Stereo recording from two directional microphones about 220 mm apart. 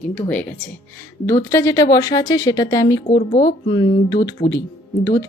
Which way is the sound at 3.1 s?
35° left (ahead or behind).